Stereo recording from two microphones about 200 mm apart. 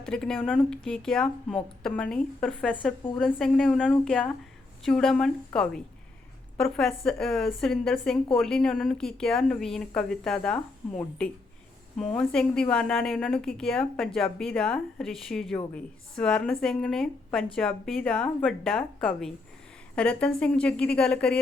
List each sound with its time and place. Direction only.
0.0 s a woman's voice: 5° left (ahead or behind)